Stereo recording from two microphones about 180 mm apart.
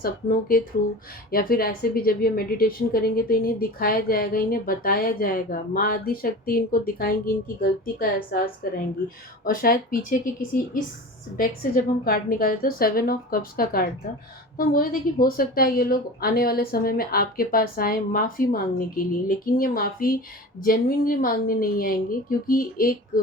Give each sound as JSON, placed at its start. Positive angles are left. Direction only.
{"t": 0.0, "sound": "a woman's voice", "side_deg": 50}